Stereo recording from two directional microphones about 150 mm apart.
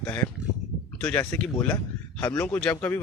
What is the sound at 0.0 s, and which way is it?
Speech, 10° left (ahead or behind).